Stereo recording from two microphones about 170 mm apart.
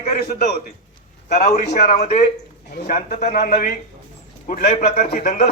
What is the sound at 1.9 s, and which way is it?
Speech, 40° left (ahead or behind).